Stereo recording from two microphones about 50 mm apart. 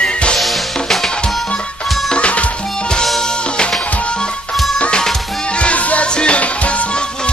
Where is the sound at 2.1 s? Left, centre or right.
Left.